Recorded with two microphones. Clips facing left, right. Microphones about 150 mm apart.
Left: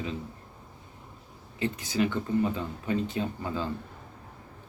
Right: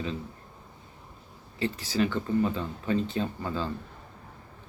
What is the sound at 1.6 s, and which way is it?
Speech, 15° left (ahead or behind).